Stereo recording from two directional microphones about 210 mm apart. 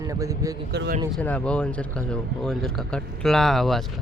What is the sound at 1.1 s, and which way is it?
Speech, 5° left (ahead or behind).